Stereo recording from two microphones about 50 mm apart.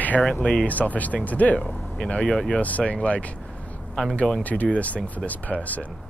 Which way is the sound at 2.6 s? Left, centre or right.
Left.